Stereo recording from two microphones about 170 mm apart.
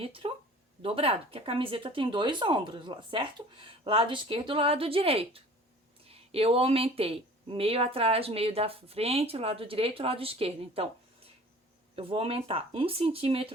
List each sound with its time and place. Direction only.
0.0 s speech: 35° right (ahead or behind)